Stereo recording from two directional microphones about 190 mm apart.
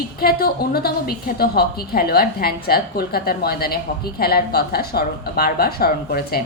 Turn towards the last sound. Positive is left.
turn(degrees=55)  # may be behind; listen again after turning